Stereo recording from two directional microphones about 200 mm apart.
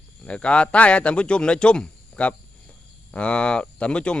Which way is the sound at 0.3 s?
5° left (ahead or behind).